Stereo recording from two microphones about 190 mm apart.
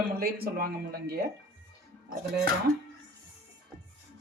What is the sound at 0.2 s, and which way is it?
Speech, 55° right (ahead or behind).